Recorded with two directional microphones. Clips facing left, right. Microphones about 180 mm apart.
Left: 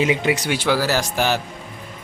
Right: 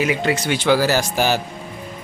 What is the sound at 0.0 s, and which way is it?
A woman's voice, 20° left (ahead or behind).